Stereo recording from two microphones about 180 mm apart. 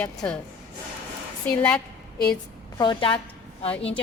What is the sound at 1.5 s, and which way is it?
Speech, 10° left (ahead or behind).